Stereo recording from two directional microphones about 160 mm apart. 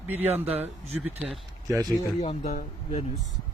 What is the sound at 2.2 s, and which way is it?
Speech, 45° left (ahead or behind).